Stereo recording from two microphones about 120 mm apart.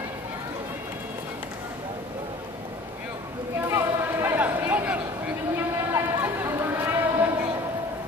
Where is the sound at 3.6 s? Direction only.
20° right (ahead or behind).